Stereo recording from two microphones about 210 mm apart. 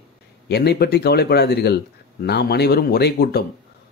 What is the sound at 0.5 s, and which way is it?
Speech, 50° left (ahead or behind).